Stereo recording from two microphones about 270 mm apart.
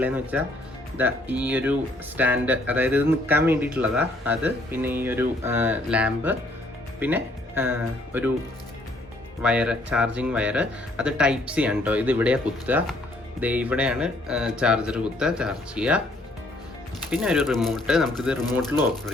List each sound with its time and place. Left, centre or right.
0.0 s speech: centre
9.4 s speech: centre
17.1 s speech: centre